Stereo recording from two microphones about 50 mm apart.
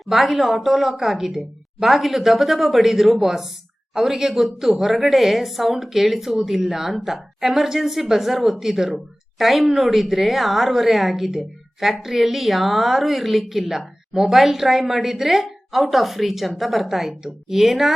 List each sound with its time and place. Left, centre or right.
0.0 s a woman's voice: centre